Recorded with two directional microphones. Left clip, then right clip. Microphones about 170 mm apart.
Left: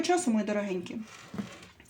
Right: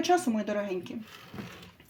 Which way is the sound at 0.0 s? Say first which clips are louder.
Right 1 dB; 10° right (ahead or behind).